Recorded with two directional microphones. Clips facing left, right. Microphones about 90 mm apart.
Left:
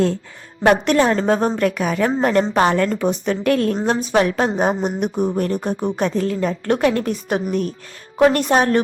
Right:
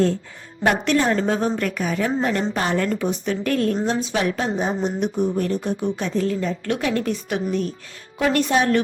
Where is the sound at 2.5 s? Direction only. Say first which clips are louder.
Left 5 dB; 65° left (ahead or behind).